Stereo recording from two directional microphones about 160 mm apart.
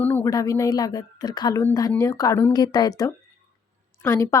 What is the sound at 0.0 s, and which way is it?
A woman's voice, 15° left (ahead or behind).